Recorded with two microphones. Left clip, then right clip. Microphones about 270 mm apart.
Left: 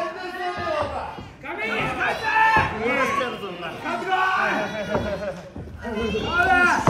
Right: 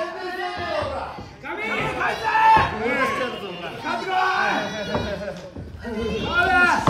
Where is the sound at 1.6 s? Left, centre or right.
Centre.